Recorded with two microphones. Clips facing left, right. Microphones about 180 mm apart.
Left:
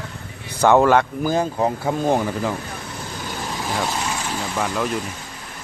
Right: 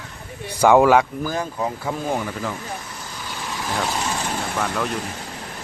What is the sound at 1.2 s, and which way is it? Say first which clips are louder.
Speech: left 5 dB; 25° left (ahead or behind).